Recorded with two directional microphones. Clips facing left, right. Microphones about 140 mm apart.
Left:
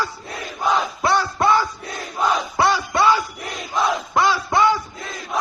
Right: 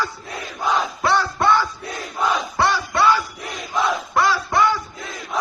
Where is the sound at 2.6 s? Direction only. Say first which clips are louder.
Left 1 dB; 15° left (ahead or behind).